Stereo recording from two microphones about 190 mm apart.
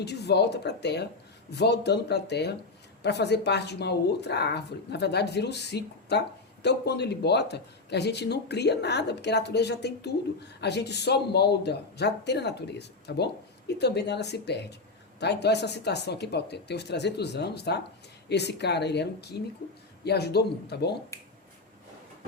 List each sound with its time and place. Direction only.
0.0 s a woman's voice: 60° left (ahead or behind)
21.1 s finger snapping: 15° left (ahead or behind)